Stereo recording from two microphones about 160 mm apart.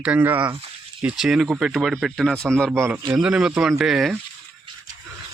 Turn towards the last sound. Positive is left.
turn(degrees=0)  # may be behind; listen again after turning